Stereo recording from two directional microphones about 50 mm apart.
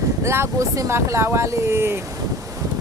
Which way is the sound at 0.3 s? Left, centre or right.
Right.